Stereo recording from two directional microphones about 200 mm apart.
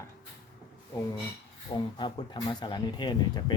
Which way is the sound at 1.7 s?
25° left (ahead or behind).